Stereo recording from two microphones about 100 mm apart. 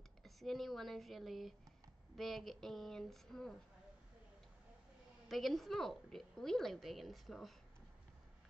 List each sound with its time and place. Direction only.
0.2 s a woman's voice: centre (ahead or behind)
5.3 s a woman's voice: centre (ahead or behind)